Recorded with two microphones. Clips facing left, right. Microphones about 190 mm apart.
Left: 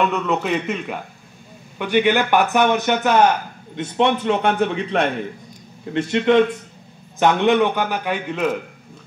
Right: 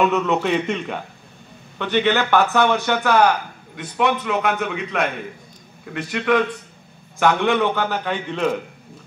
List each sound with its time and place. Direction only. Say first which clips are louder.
0.0 s a man's voice: right 2 dB; centre (ahead or behind)